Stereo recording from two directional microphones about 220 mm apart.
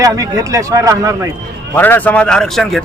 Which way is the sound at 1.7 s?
10° left (ahead or behind).